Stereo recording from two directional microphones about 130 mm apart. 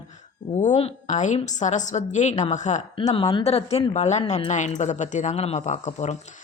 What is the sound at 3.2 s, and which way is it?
Speech, 30° left (ahead or behind).